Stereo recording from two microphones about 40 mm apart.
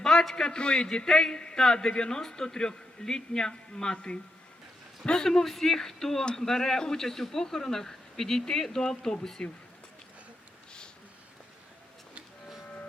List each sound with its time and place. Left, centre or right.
0.0 s a man's voice: centre
12.6 s vehicle: left